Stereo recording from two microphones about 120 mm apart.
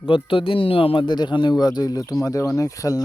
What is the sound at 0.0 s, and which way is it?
Speech, 45° left (ahead or behind).